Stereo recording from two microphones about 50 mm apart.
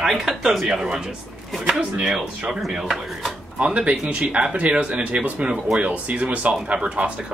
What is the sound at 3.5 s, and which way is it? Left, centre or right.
Speech, right.